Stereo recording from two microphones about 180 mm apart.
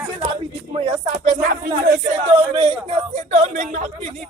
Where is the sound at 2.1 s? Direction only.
30° right (ahead or behind).